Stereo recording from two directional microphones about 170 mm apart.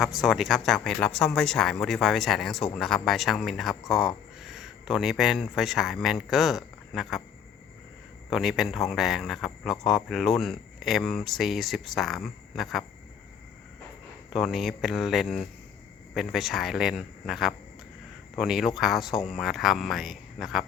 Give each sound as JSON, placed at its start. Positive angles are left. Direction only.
{"t": 0.0, "sound": "speech", "side_deg": 0}
{"t": 8.3, "sound": "speech", "side_deg": 0}
{"t": 14.3, "sound": "speech", "side_deg": 0}